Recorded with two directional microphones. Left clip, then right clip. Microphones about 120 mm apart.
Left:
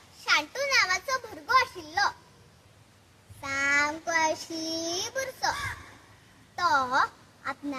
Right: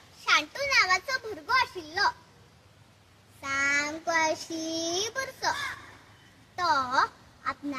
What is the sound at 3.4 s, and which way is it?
Child singing, 25° left (ahead or behind).